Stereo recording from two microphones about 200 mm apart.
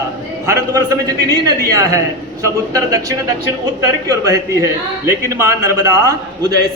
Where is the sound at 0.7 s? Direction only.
15° right (ahead or behind).